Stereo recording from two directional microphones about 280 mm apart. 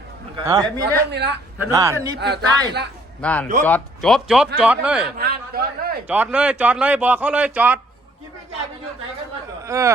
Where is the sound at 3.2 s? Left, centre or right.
Centre.